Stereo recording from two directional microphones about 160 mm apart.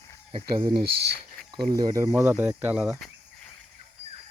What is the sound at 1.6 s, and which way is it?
Speech, 25° right (ahead or behind).